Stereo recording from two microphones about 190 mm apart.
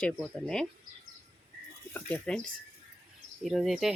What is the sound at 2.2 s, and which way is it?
Speech, 5° left (ahead or behind).